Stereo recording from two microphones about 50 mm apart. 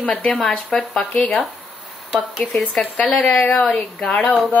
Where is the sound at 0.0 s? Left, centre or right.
Left.